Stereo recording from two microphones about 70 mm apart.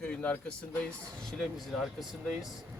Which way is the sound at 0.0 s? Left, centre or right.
Centre.